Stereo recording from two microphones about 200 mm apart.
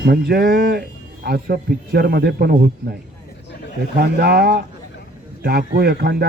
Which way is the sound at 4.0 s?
50° right (ahead or behind).